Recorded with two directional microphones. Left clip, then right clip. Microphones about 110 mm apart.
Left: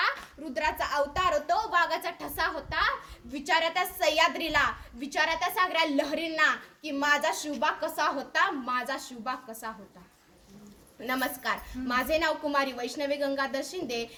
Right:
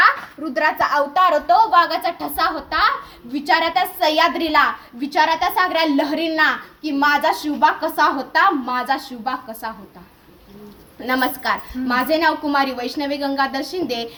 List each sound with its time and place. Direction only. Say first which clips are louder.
0.5 s a woman's voice: right 11 dB; 35° left (ahead or behind)
11.0 s a woman's voice: right 10 dB; 30° left (ahead or behind)